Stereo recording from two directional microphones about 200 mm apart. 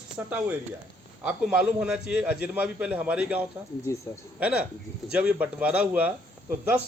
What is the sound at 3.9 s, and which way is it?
Speech, 15° left (ahead or behind).